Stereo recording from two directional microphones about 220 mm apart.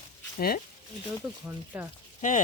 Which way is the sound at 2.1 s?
35° left (ahead or behind).